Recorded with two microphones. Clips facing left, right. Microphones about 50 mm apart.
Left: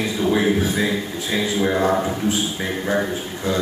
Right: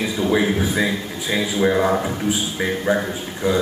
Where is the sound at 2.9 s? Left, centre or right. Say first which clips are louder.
Even; centre.